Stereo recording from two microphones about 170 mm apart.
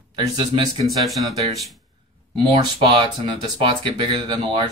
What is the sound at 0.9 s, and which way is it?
Speech, centre (ahead or behind).